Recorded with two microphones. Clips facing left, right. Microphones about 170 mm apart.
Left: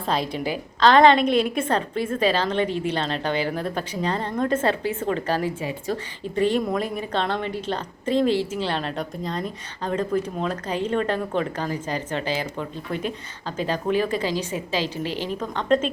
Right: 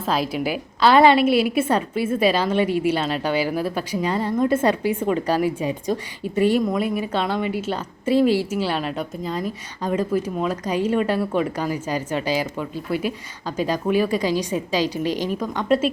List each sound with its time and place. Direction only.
0.0 s a woman's voice: 5° right (ahead or behind)